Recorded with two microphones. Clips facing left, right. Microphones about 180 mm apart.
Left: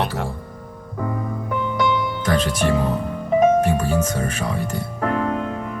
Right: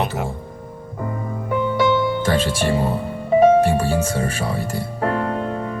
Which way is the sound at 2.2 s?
30° right (ahead or behind).